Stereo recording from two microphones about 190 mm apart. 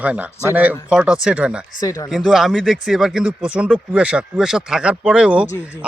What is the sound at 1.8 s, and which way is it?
Speech, 15° left (ahead or behind).